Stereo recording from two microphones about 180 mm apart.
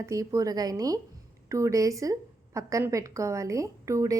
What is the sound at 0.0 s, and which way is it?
A woman's voice, 15° right (ahead or behind).